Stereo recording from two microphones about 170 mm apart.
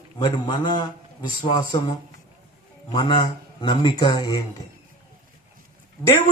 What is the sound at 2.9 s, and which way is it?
Speech, 25° left (ahead or behind).